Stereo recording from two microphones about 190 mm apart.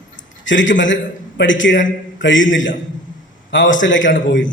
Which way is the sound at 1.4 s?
80° left.